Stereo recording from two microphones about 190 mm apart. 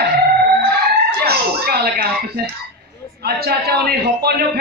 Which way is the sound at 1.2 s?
55° right (ahead or behind).